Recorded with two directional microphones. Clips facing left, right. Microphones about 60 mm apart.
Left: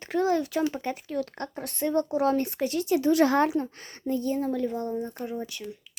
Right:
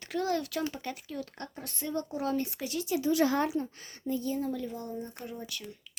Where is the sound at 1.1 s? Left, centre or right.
Left.